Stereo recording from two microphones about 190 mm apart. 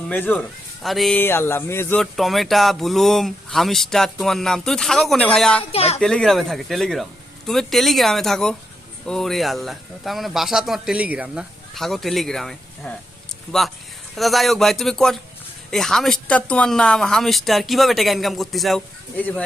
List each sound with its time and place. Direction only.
0.1 s speech: 10° left (ahead or behind)
5.7 s speech: 30° left (ahead or behind)
6.0 s speech: 5° left (ahead or behind)
14.2 s speech: centre (ahead or behind)